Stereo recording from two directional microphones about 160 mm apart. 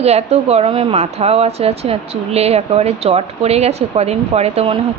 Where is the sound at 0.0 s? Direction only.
40° right (ahead or behind).